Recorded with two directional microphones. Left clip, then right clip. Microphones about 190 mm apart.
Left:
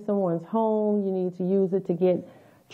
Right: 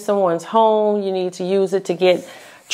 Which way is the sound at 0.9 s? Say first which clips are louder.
Right 7 dB; 10° right (ahead or behind).